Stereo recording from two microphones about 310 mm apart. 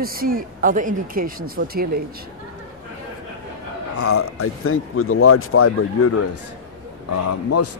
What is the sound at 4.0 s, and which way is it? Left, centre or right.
A man's voice, left.